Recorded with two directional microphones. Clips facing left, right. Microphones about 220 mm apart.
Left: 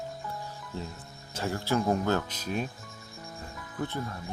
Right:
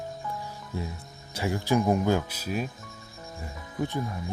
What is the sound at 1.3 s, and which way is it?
Speech, 15° right (ahead or behind).